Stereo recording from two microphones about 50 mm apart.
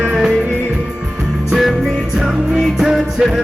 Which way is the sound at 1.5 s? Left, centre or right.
Centre.